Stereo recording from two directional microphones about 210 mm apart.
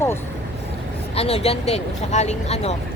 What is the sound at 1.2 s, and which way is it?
Speech, 30° left (ahead or behind).